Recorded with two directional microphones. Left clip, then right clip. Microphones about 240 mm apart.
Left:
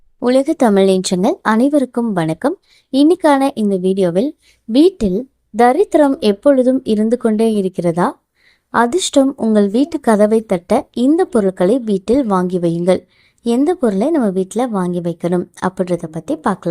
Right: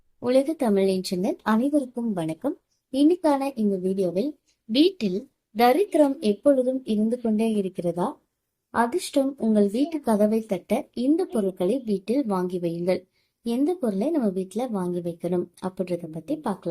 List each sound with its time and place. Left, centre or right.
0.2 s speech: left
5.7 s speech: left
6.0 s speech: left